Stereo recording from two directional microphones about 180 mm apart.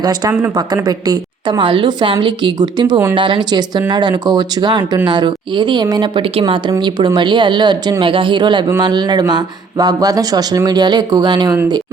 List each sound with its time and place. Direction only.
0.0 s speech: 20° right (ahead or behind)